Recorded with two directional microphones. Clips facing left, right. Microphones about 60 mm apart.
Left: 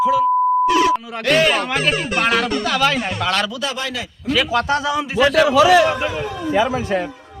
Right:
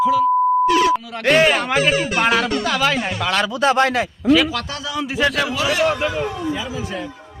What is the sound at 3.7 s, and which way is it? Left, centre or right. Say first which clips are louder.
Speech: right 9 dB; right.